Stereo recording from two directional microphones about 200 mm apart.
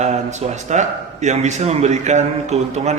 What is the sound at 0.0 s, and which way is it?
Speech, 35° right (ahead or behind).